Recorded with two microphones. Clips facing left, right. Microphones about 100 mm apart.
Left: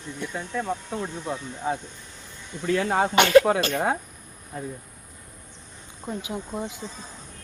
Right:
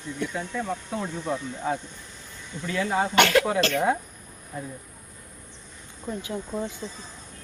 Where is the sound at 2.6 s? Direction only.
45° left (ahead or behind).